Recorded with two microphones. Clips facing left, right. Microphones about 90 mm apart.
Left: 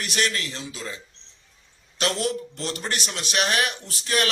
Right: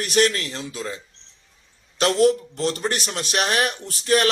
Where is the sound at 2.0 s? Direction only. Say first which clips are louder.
Right 8 dB; 40° right (ahead or behind).